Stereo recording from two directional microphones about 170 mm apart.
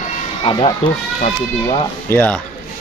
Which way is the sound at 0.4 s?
30° left (ahead or behind).